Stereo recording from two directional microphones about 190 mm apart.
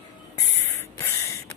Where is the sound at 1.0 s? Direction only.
15° left (ahead or behind).